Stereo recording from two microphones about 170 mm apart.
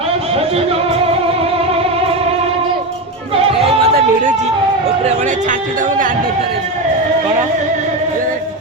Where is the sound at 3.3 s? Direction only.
35° right (ahead or behind).